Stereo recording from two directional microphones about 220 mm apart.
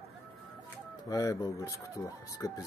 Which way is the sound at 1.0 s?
15° left (ahead or behind).